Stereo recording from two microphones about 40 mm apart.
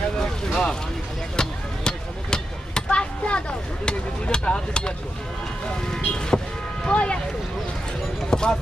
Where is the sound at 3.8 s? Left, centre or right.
Left.